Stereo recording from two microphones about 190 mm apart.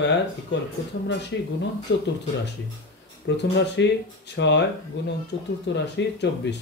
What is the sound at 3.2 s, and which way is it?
Speech, 65° left (ahead or behind).